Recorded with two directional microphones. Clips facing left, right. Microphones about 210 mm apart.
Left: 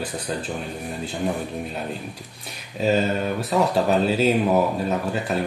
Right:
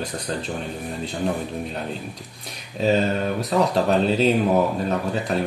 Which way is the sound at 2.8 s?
Centre (ahead or behind).